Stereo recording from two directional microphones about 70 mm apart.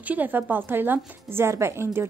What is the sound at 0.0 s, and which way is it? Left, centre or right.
Speech, right.